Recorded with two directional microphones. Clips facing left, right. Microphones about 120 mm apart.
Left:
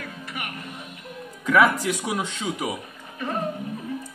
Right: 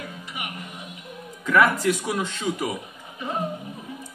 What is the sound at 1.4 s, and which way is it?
A man's voice, 10° left (ahead or behind).